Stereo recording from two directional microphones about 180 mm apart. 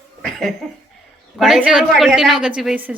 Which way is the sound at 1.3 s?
Centre (ahead or behind).